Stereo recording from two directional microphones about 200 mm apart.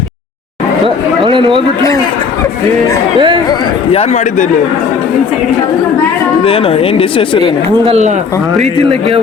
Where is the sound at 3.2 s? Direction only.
25° right (ahead or behind).